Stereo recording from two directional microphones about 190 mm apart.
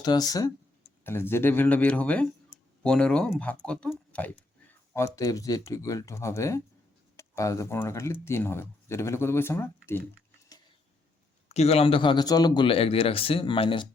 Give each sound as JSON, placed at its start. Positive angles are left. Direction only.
{"t": 0.0, "sound": "speech", "side_deg": 20}
{"t": 11.4, "sound": "speech", "side_deg": 35}